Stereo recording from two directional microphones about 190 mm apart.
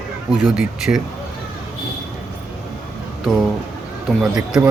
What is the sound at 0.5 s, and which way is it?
Speech, 5° right (ahead or behind).